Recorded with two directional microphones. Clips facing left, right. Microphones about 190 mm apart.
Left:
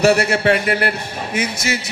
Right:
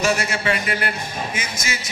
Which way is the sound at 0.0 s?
60° left (ahead or behind).